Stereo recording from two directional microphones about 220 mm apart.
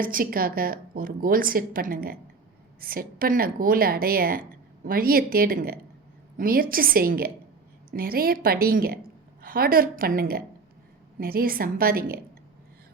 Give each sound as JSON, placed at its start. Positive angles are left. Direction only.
{"t": 0.0, "sound": "a woman's voice", "side_deg": -40}